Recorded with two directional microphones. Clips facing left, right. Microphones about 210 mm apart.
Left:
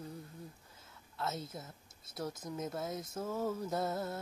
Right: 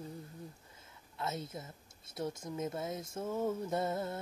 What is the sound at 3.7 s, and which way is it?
Speech, centre (ahead or behind).